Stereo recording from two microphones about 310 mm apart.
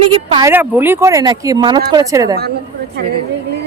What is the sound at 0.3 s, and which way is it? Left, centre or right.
Speech, centre.